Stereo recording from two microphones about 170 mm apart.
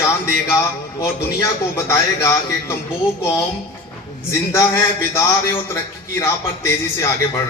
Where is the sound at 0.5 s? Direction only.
15° left (ahead or behind).